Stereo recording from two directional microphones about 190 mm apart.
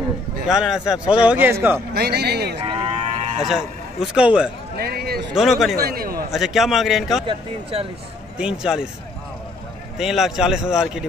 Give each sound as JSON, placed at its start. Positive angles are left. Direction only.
{"t": 0.5, "sound": "a man's voice", "side_deg": -5}
{"t": 2.0, "sound": "speech", "side_deg": -60}
{"t": 2.6, "sound": "cattle", "side_deg": -30}
{"t": 3.4, "sound": "a man's voice", "side_deg": 0}
{"t": 4.7, "sound": "a man's voice", "side_deg": -55}
{"t": 5.3, "sound": "a man's voice", "side_deg": 0}
{"t": 5.8, "sound": "a man's voice", "side_deg": -50}
{"t": 6.3, "sound": "a man's voice", "side_deg": 0}
{"t": 8.4, "sound": "a man's voice", "side_deg": -5}
{"t": 9.9, "sound": "a man's voice", "side_deg": 0}